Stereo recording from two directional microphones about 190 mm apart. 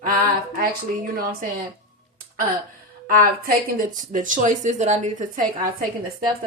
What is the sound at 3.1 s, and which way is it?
Speech, 45° right (ahead or behind).